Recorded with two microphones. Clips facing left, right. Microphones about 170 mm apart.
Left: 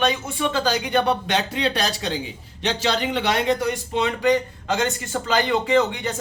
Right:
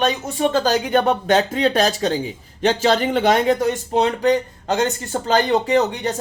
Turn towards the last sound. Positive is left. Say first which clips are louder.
# right 2 dB
turn(degrees=-40)  # may be behind; listen again after turning